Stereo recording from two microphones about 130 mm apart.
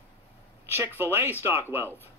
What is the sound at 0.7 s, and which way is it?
Speech, 15° right (ahead or behind).